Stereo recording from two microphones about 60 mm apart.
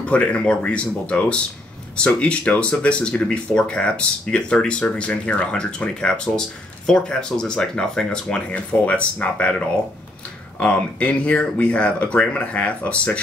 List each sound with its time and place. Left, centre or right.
0.0 s speech: left
10.6 s speech: left